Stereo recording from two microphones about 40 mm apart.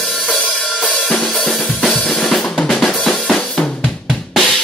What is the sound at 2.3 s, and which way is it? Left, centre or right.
Drum, centre.